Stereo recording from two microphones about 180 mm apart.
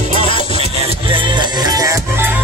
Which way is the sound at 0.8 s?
30° right (ahead or behind).